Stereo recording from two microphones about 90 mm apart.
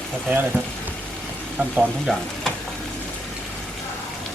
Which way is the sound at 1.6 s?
20° right (ahead or behind).